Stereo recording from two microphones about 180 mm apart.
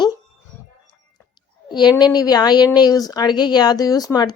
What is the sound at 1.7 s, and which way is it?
Speech, 25° left (ahead or behind).